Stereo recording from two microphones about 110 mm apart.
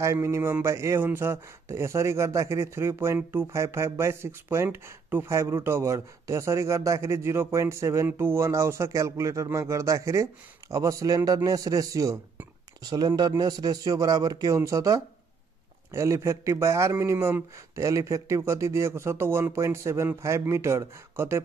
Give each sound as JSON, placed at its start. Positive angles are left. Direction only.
{"t": 0.0, "sound": "speech", "side_deg": -25}